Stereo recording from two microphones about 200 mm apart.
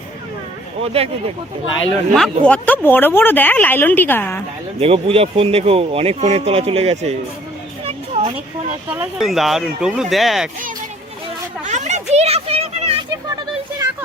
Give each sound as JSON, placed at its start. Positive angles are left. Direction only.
{"t": 0.8, "sound": "speech", "side_deg": -30}
{"t": 2.1, "sound": "speech", "side_deg": 5}
{"t": 4.8, "sound": "speech", "side_deg": -30}
{"t": 7.9, "sound": "a sound", "side_deg": -30}
{"t": 8.9, "sound": "speech", "side_deg": -5}
{"t": 11.6, "sound": "a sound", "side_deg": -35}